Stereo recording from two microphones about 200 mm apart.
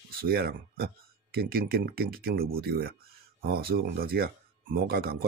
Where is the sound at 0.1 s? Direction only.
50° right (ahead or behind).